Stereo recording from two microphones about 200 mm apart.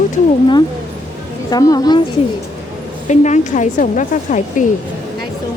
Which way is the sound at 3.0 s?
35° left (ahead or behind).